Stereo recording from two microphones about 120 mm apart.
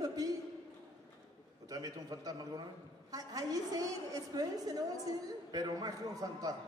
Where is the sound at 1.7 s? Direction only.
30° right (ahead or behind).